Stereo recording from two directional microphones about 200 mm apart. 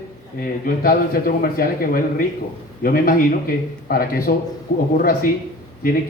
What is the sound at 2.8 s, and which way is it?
Speech, 45° left (ahead or behind).